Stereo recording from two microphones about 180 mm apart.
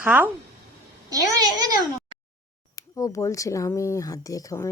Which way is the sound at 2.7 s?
20° left (ahead or behind).